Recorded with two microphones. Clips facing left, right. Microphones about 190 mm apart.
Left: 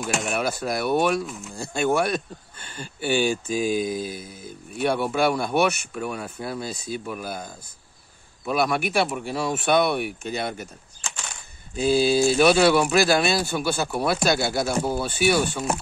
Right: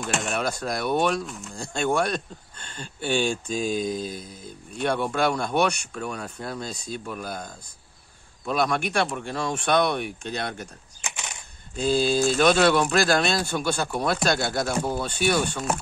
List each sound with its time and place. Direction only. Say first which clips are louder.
0.0 s speech: left 2 dB; centre (ahead or behind)
11.0 s a sound: right 1 dB; 20° right (ahead or behind)
11.7 s speech: left 3 dB; 10° left (ahead or behind)